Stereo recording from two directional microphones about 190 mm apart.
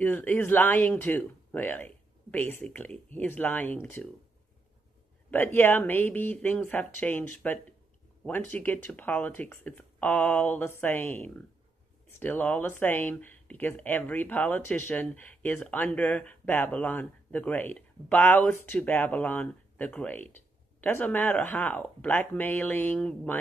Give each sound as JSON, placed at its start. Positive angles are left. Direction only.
{"t": 0.0, "sound": "speech", "side_deg": 10}
{"t": 5.3, "sound": "speech", "side_deg": 10}